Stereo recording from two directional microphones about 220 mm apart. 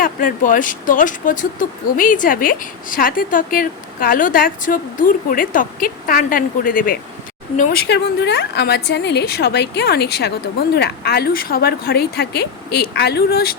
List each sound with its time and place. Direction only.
0.0 s speech: 40° left (ahead or behind)
7.9 s a woman's voice: 50° left (ahead or behind)